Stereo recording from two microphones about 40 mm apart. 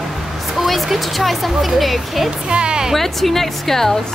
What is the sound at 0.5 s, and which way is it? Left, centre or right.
Speech, centre.